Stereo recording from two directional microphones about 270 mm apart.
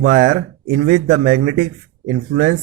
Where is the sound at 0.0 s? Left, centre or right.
Right.